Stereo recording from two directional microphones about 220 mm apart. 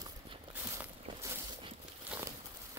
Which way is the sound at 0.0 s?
15° right (ahead or behind).